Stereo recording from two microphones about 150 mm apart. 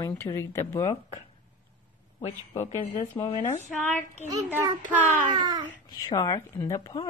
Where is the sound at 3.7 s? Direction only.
10° left (ahead or behind).